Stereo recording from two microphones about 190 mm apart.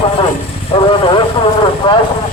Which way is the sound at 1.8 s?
25° left (ahead or behind).